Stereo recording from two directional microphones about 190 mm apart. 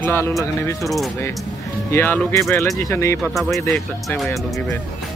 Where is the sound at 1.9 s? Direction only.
10° left (ahead or behind).